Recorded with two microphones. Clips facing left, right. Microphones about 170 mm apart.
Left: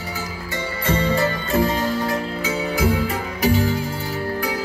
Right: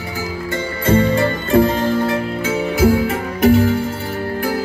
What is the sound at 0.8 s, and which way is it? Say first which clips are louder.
Music: right 5 dB; 50° right (ahead or behind).